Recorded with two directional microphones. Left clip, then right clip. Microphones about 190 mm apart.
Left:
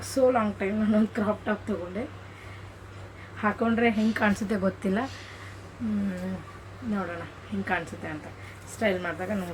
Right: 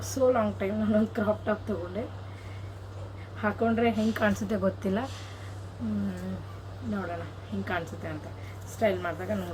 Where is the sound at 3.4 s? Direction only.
5° right (ahead or behind).